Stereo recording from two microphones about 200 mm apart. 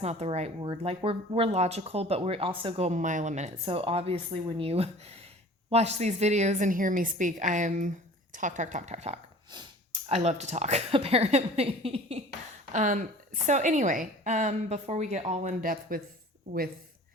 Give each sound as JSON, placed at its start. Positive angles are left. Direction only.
{"t": 0.0, "sound": "a woman's voice", "side_deg": -30}